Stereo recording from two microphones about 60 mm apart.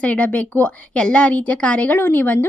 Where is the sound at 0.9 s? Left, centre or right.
Centre.